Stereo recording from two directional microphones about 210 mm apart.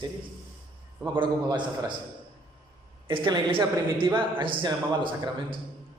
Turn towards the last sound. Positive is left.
turn(degrees=-25)  # may be behind; listen again after turning